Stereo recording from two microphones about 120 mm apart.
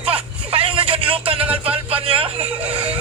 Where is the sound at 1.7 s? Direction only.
55° right (ahead or behind).